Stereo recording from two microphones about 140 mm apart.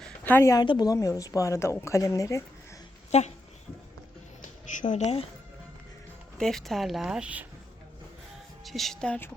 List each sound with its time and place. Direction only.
0.0 s a sound: 15° left (ahead or behind)
0.6 s a woman's voice: 30° left (ahead or behind)
3.1 s speech: 50° left (ahead or behind)
4.8 s speech: 60° left (ahead or behind)
6.3 s speech: centre (ahead or behind)
8.6 s speech: centre (ahead or behind)